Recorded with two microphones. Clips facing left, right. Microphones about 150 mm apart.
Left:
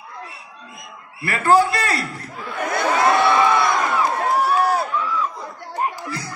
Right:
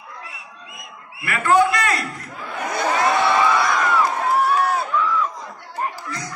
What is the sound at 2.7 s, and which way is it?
Crowd, 60° left (ahead or behind).